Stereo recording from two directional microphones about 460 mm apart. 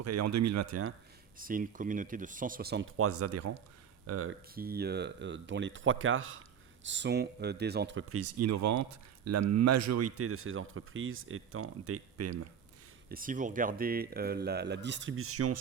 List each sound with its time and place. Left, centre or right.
0.0 s speech: right
1.4 s speech: centre; by 12.5 s right
13.1 s speech: centre